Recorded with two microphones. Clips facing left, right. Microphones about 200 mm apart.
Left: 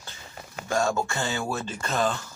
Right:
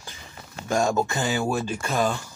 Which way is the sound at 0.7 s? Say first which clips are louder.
Right 3 dB; 15° right (ahead or behind).